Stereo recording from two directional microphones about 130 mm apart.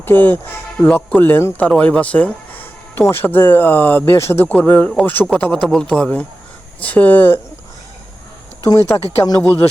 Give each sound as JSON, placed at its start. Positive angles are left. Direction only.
{"t": 0.0, "sound": "speech", "side_deg": 15}
{"t": 8.6, "sound": "speech", "side_deg": 25}